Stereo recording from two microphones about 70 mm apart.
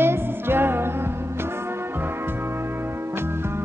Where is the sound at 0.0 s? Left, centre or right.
Right.